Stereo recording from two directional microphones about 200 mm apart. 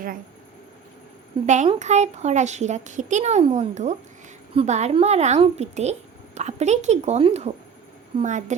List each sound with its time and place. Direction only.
1.5 s speech: 35° right (ahead or behind)